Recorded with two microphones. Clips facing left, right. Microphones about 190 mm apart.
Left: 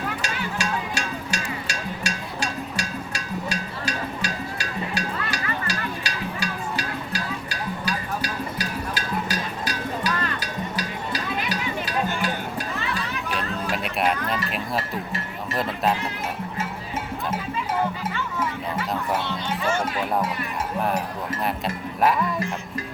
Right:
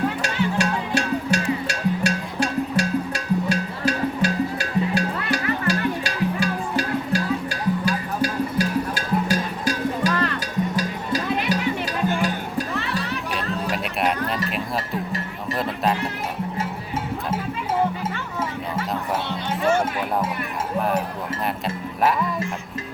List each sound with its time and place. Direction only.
0.2 s music: 60° right (ahead or behind); by 12.6 s 45° right (ahead or behind)
13.3 s music: centre (ahead or behind)
15.5 s music: centre (ahead or behind)